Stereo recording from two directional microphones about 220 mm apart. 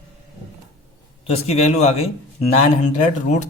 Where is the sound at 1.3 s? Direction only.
30° left (ahead or behind).